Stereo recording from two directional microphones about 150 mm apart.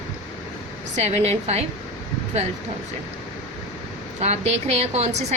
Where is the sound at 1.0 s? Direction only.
45° right (ahead or behind).